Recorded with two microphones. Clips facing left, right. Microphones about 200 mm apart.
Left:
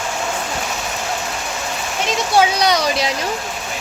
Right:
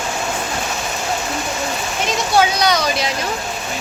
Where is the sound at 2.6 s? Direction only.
30° left (ahead or behind).